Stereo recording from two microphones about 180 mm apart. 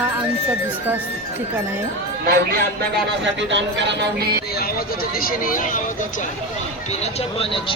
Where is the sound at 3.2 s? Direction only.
85° right; by 4.4 s 65° right (ahead or behind).